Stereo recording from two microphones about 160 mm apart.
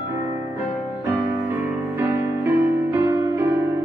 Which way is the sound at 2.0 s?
15° right (ahead or behind).